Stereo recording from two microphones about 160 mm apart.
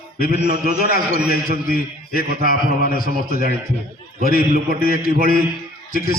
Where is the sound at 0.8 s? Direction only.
65° left (ahead or behind).